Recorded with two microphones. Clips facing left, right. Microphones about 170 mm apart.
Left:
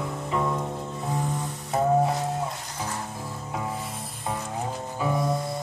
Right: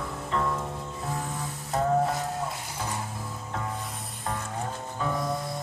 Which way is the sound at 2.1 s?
Centre (ahead or behind).